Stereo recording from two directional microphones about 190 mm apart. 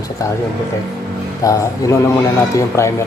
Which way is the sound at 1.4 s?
15° left (ahead or behind).